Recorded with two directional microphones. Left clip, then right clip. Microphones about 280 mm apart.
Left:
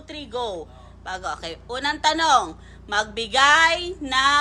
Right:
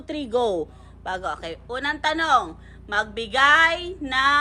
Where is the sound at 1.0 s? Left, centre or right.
Centre.